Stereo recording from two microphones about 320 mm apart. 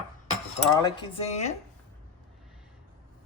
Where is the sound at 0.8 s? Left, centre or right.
Centre.